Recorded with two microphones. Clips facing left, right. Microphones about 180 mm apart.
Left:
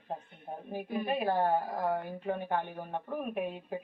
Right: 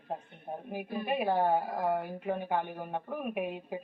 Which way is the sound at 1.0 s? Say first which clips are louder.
Right 1 dB; 10° right (ahead or behind).